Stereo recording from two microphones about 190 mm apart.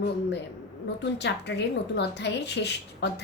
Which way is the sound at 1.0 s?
65° left (ahead or behind).